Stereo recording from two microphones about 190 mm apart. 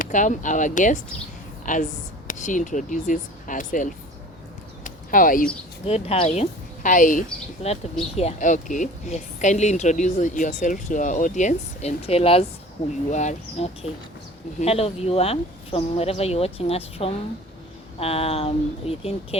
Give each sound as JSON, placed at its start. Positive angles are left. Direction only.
{"t": 0.0, "sound": "a woman's voice", "side_deg": 40}
{"t": 4.8, "sound": "a sound", "side_deg": 45}
{"t": 5.8, "sound": "a woman's voice", "side_deg": 30}